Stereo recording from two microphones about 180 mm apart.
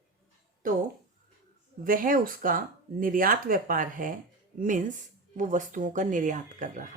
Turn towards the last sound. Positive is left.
turn(degrees=-45)  # may be behind; listen again after turning